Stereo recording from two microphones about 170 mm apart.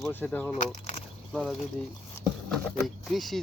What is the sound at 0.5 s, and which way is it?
Speech, 45° left (ahead or behind).